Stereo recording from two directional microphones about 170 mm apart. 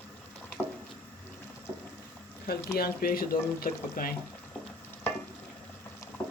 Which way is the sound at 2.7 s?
60° left (ahead or behind).